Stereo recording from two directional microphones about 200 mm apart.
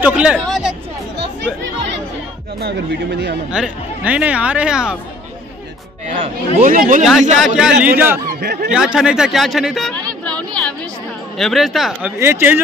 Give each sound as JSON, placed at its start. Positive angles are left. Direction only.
{"t": 0.0, "sound": "chatter", "side_deg": -5}
{"t": 2.6, "sound": "speech", "side_deg": -55}
{"t": 3.5, "sound": "speech", "side_deg": -5}
{"t": 6.0, "sound": "speech", "side_deg": -35}
{"t": 7.1, "sound": "speech", "side_deg": 0}
{"t": 8.3, "sound": "speech", "side_deg": -55}
{"t": 8.7, "sound": "speech", "side_deg": -5}
{"t": 11.3, "sound": "speech", "side_deg": 0}
{"t": 12.2, "sound": "speech", "side_deg": -10}